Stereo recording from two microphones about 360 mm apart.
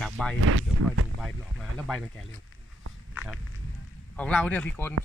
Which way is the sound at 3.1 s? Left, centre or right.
Centre.